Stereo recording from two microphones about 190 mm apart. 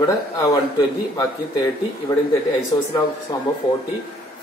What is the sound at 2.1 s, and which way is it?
Speech, 25° left (ahead or behind).